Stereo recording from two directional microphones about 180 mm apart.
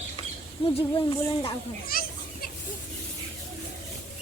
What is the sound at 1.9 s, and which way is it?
Children playing, 55° left (ahead or behind).